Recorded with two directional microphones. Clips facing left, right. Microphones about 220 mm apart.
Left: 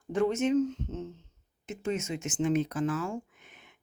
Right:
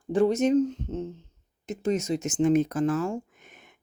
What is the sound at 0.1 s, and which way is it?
Speech, 35° right (ahead or behind).